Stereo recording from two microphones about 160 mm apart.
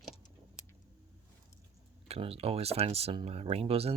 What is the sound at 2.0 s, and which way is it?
Speech, 40° right (ahead or behind).